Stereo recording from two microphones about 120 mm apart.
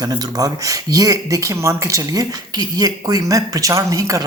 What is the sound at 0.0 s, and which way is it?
Speech, 35° right (ahead or behind).